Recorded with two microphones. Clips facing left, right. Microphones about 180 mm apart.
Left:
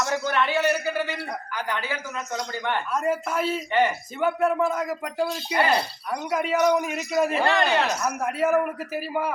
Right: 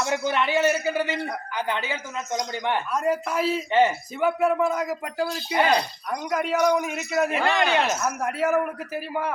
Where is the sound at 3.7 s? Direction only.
25° right (ahead or behind).